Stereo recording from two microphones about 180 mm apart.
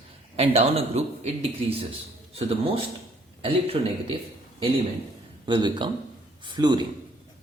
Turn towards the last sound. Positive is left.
turn(degrees=-25)  # may be behind; listen again after turning